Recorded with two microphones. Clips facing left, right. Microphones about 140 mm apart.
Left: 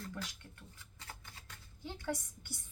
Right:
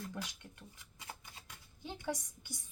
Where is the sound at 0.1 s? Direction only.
15° right (ahead or behind).